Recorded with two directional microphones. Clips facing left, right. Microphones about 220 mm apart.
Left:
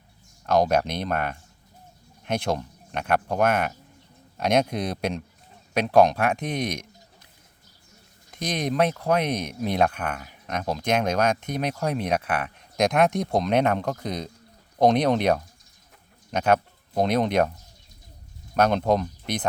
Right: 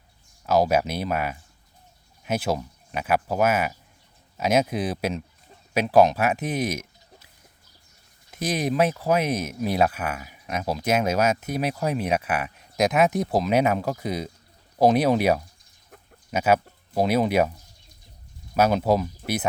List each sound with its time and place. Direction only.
0.4 s speech: 5° right (ahead or behind)
8.3 s speech: 5° right (ahead or behind)
18.5 s speech: 5° right (ahead or behind)